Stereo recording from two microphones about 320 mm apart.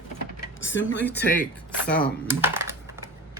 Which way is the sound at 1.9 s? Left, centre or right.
Centre.